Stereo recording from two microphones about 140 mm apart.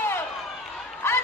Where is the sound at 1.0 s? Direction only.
20° left (ahead or behind).